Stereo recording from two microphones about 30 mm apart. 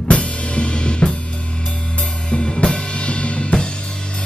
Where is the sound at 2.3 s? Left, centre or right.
Left.